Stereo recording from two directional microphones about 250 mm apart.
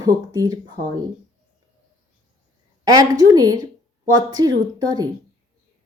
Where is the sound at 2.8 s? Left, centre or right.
Centre.